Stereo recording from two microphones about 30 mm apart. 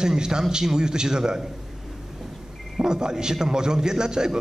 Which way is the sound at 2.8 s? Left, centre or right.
Right.